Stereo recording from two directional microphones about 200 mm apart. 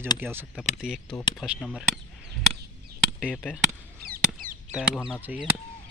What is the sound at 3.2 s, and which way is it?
Speech, 5° right (ahead or behind).